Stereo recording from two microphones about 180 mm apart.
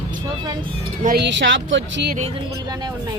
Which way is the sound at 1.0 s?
70° right (ahead or behind).